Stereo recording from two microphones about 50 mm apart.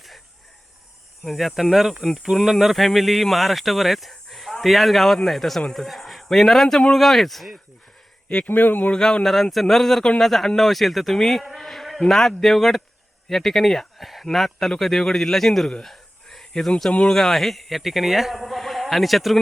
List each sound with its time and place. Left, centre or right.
1.2 s speech: centre
8.4 s speech: left
8.9 s speech: centre
15.8 s a sound: centre
16.5 s speech: centre